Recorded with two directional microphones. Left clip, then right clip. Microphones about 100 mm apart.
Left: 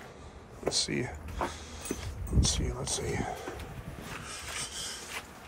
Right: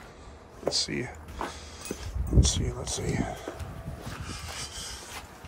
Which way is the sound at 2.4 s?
40° right (ahead or behind).